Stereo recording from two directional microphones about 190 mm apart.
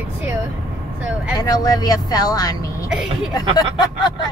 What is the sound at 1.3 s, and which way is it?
Speech, 20° left (ahead or behind).